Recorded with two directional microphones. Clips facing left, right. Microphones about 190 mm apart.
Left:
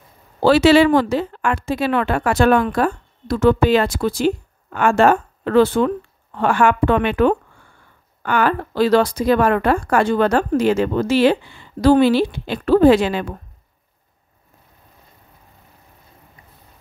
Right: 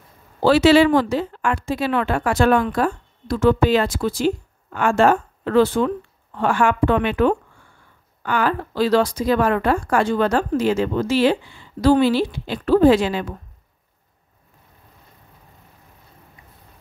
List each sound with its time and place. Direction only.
0.4 s speech: 65° left (ahead or behind)